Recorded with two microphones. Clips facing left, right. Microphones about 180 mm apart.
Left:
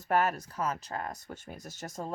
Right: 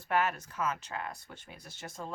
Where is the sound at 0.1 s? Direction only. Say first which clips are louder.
Left 3 dB; 40° left (ahead or behind).